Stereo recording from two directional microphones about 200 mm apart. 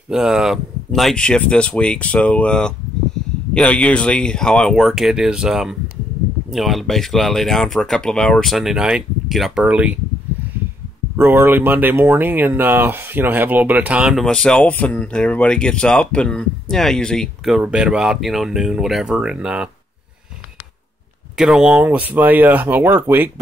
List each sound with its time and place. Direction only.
0.1 s speech: centre (ahead or behind)
11.1 s speech: 10° right (ahead or behind)
21.4 s speech: 5° right (ahead or behind)